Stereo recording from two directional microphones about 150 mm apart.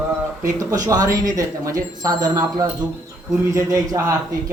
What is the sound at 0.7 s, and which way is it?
Speech, 25° right (ahead or behind).